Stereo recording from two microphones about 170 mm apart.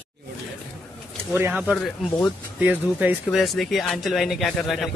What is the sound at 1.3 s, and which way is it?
Speech, 10° right (ahead or behind).